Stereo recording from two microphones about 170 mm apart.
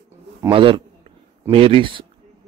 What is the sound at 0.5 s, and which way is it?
Speech, 30° right (ahead or behind).